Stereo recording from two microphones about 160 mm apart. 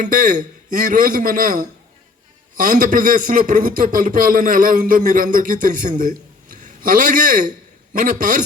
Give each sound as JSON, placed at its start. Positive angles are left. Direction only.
{"t": 0.0, "sound": "a man's voice", "side_deg": -55}